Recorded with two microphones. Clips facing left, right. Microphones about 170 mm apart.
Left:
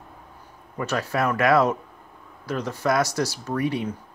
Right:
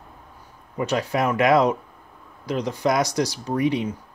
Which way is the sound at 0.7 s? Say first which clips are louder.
Right 2 dB; 20° right (ahead or behind).